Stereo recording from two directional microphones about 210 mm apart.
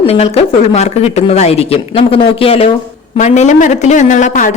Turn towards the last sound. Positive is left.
turn(degrees=35)  # may be behind; listen again after turning